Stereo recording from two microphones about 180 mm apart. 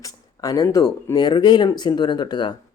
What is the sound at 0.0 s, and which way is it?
Speech, 20° left (ahead or behind).